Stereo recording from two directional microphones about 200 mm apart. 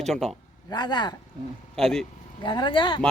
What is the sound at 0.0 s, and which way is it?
Speech, centre (ahead or behind).